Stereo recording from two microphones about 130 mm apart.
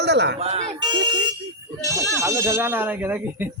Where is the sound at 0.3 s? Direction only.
55° right (ahead or behind).